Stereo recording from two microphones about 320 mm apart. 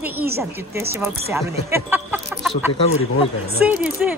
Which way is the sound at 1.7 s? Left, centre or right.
Centre.